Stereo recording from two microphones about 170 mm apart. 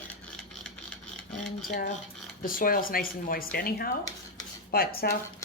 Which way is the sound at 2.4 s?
55° left (ahead or behind).